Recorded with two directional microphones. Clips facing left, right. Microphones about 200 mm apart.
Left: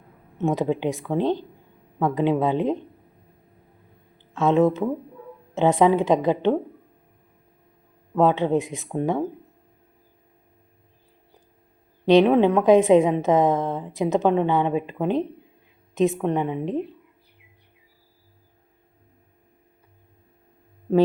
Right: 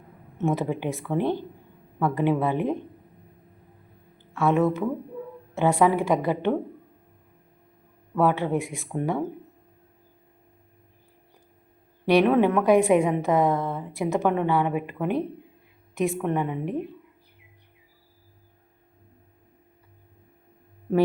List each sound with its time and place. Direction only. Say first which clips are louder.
0.3 s speech: left 3 dB; 15° left (ahead or behind)
4.4 s a woman's voice: left 3 dB; 20° left (ahead or behind)
8.1 s a woman's voice: left 3 dB; 20° left (ahead or behind)
12.0 s a woman's voice: left 3 dB; 20° left (ahead or behind)